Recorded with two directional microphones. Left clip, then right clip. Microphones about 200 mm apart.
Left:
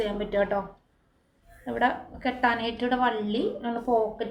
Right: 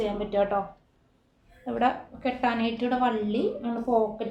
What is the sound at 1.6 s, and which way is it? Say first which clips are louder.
A woman's voice: even; 10° right (ahead or behind).